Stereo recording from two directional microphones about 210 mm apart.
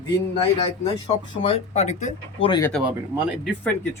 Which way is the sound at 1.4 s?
30° left (ahead or behind).